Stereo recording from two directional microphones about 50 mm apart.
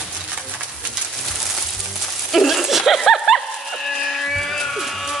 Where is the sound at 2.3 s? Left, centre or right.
Centre.